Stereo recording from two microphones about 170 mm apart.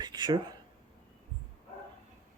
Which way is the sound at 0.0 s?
25° right (ahead or behind).